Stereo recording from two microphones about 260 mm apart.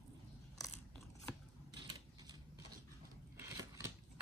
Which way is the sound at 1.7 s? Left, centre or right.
Centre.